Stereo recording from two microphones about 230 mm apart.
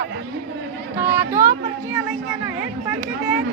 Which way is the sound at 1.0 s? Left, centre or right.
Centre.